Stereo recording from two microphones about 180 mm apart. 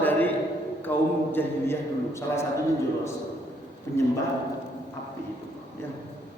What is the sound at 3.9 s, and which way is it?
Speech, 15° left (ahead or behind).